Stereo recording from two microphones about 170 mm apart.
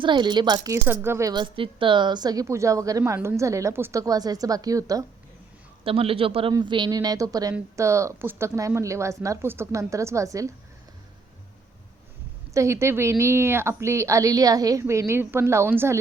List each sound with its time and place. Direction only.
0.0 s a woman's voice: 25° right (ahead or behind)
1.3 s a woman's voice: 30° right (ahead or behind)
5.8 s a man's voice: 35° right (ahead or behind)
12.5 s a woman's voice: 15° right (ahead or behind)